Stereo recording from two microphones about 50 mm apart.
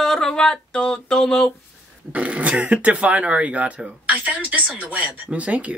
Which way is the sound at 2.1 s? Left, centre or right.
Right.